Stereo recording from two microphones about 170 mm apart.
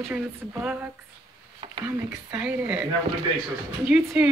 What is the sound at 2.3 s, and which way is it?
Speech, 5° right (ahead or behind).